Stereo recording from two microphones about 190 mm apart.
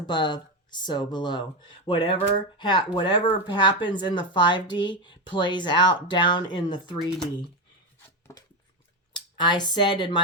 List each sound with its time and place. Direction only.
0.0 s speech: 25° left (ahead or behind)
8.3 s a sound: 15° left (ahead or behind)
9.1 s speech: 25° left (ahead or behind)